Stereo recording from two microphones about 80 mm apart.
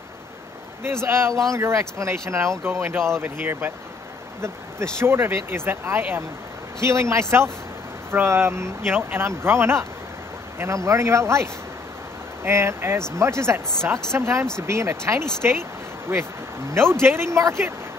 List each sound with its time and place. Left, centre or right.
0.8 s speech: right
5.0 s speech: right
12.4 s speech: right